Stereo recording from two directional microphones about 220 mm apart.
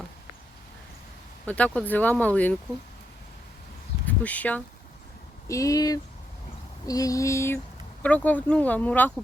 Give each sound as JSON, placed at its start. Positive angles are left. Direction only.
{"t": 1.5, "sound": "speech", "side_deg": 5}
{"t": 4.0, "sound": "speech", "side_deg": 5}